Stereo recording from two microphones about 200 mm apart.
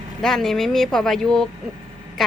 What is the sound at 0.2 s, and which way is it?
Speech, centre (ahead or behind).